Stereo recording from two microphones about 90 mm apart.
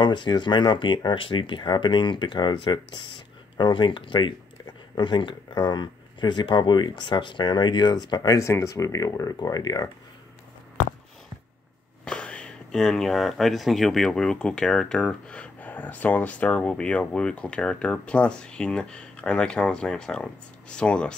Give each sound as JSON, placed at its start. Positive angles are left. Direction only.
{"t": 0.0, "sound": "speech", "side_deg": 60}
{"t": 12.0, "sound": "speech", "side_deg": 10}